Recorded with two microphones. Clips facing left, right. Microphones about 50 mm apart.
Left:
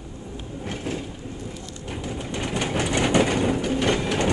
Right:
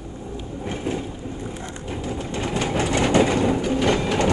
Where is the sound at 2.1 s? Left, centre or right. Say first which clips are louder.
Right 2 dB; centre.